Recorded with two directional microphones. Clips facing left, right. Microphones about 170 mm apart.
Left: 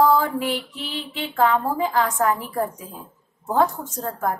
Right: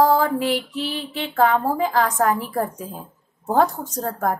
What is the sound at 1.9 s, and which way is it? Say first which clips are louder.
Speech: right 1 dB; 40° right (ahead or behind).